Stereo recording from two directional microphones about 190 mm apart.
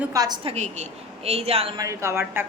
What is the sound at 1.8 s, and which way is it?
Speech, 15° right (ahead or behind).